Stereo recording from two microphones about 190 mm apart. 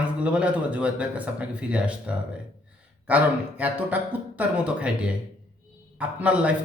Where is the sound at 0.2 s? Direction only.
5° right (ahead or behind).